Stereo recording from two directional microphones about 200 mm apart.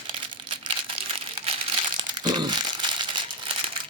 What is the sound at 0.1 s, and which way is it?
Crumpling, 25° right (ahead or behind).